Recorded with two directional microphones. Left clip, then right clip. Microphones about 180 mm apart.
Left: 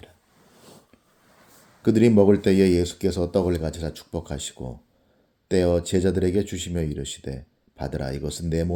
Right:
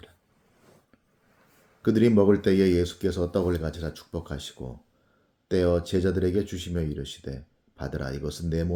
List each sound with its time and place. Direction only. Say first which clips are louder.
1.8 s speech: left 3 dB; 30° left (ahead or behind)